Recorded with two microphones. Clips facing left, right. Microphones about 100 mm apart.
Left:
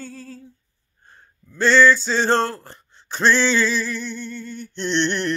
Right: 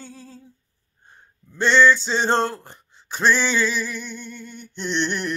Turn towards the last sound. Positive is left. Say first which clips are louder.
# left 3 dB
turn(degrees=-5)  # may be behind; listen again after turning